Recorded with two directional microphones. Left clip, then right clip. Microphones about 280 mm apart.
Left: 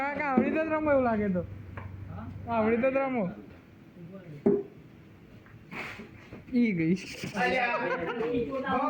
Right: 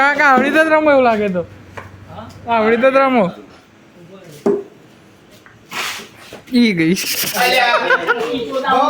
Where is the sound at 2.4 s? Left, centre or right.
Right.